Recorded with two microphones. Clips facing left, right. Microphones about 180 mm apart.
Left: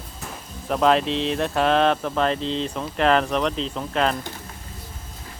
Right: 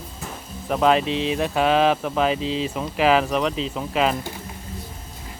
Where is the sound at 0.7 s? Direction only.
Centre (ahead or behind).